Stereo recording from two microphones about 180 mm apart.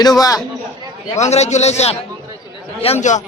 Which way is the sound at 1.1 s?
40° left (ahead or behind).